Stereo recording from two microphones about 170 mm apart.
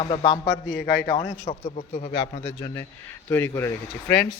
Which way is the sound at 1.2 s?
45° left (ahead or behind).